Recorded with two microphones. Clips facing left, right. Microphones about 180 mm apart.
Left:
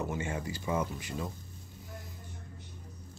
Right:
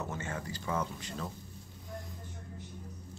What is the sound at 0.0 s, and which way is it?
Speech, 10° left (ahead or behind).